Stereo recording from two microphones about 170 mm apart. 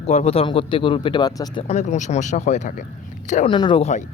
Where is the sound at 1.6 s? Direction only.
40° left (ahead or behind).